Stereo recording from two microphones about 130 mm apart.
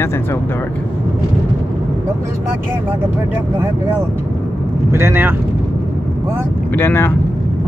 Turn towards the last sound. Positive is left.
turn(degrees=20)  # may be behind; listen again after turning